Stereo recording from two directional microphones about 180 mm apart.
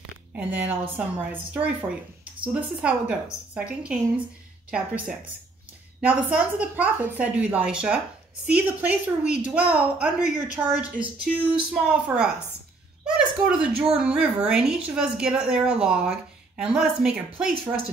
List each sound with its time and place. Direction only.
0.4 s a woman's voice: 10° right (ahead or behind)
6.3 s a woman's voice: 10° right (ahead or behind)
9.2 s a woman's voice: 40° left (ahead or behind)
9.5 s a woman's voice: 5° right (ahead or behind)